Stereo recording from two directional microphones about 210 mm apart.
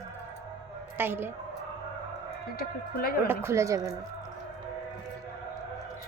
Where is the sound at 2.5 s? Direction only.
45° left (ahead or behind).